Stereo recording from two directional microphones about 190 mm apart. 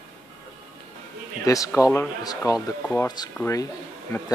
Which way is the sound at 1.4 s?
15° left (ahead or behind).